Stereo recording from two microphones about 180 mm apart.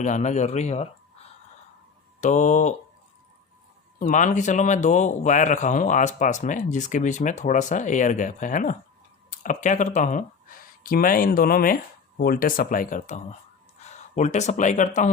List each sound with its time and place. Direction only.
0.0 s speech: 40° left (ahead or behind)
2.2 s a man's voice: 40° left (ahead or behind)
4.0 s a man's voice: 45° left (ahead or behind)